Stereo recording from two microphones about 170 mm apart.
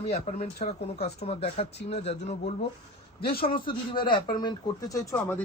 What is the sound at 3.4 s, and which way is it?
Speech, 30° left (ahead or behind).